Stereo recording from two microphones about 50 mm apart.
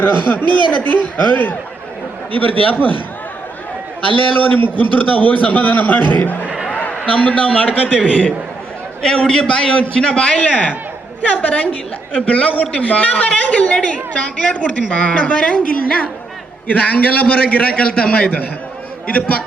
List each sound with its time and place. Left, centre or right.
0.0 s a man's voice: left
4.4 s a man's voice: left
6.5 s a sound: centre
7.0 s a woman's voice: left